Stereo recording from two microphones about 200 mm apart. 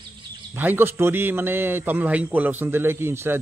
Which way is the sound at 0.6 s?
10° right (ahead or behind).